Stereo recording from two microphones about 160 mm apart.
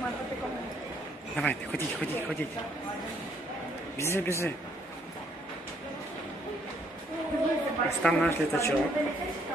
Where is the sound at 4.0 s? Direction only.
15° left (ahead or behind).